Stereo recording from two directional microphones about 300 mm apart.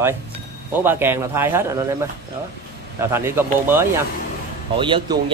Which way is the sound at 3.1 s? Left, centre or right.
Centre.